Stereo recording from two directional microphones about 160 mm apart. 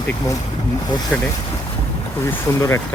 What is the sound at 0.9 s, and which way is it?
Speech, 25° left (ahead or behind).